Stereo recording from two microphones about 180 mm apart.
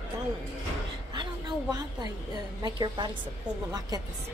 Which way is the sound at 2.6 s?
25° right (ahead or behind).